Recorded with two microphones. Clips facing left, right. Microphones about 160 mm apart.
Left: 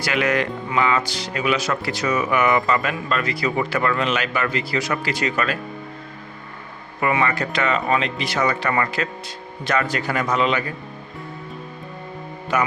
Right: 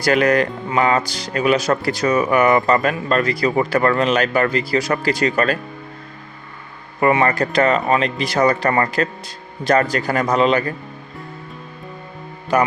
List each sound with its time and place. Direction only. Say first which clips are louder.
0.0 s speech: right 6 dB; 40° right (ahead or behind)
7.0 s speech: right 5 dB; 40° right (ahead or behind)
12.5 s speech: right 5 dB; 35° right (ahead or behind)